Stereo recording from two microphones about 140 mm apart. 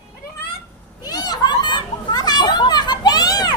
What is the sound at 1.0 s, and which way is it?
Children playing, 30° left (ahead or behind).